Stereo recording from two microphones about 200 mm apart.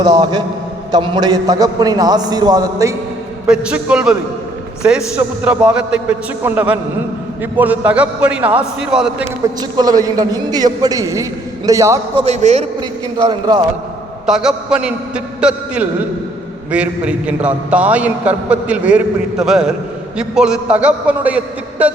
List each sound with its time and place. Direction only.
0.0 s a man's voice: 20° right (ahead or behind)
3.4 s a man's voice: 5° right (ahead or behind)
9.6 s a man's voice: 20° right (ahead or behind)
12.2 s a man's voice: 35° right (ahead or behind)
13.2 s a man's voice: 20° right (ahead or behind)
14.3 s a man's voice: 5° right (ahead or behind)